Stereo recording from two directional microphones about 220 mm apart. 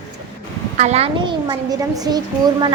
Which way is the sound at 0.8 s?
30° right (ahead or behind).